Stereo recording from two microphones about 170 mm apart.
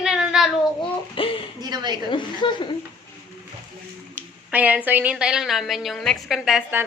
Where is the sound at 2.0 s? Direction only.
30° left (ahead or behind).